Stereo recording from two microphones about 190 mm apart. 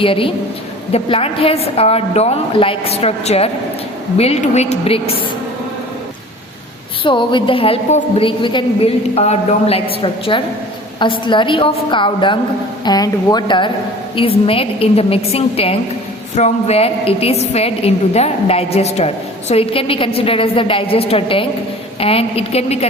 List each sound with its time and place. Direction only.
0.0 s a woman's voice: 30° left (ahead or behind)
7.0 s a woman's voice: 25° left (ahead or behind)